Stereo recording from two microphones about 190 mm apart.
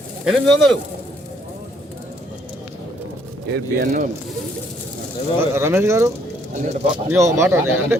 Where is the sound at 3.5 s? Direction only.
50° right (ahead or behind).